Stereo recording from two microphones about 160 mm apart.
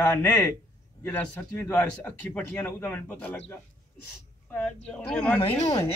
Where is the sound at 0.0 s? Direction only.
15° left (ahead or behind).